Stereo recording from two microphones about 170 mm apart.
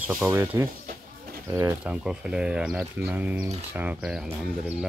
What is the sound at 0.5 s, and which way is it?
Speech, 20° right (ahead or behind).